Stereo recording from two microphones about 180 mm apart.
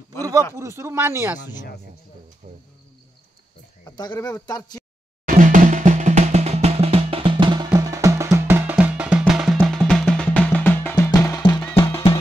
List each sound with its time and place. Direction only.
0.6 s speech: 15° right (ahead or behind)
2.4 s cricket: 45° right (ahead or behind)
3.8 s speech: 25° left (ahead or behind)
5.2 s drum: 45° right (ahead or behind); by 11.1 s 10° left (ahead or behind)
11.1 s music: 15° left (ahead or behind)